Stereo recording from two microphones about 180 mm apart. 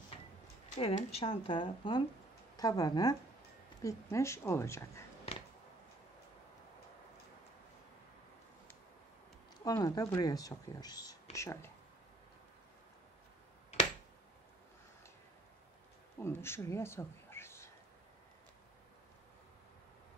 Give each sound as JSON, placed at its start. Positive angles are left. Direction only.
{"t": 0.7, "sound": "a woman's voice", "side_deg": 35}
{"t": 9.7, "sound": "a woman's voice", "side_deg": 20}
{"t": 16.2, "sound": "speech", "side_deg": 15}